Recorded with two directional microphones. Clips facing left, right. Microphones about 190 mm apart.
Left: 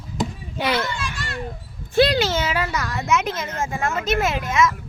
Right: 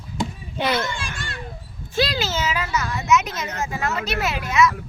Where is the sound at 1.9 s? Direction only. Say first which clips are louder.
Left 6 dB; 60° left (ahead or behind).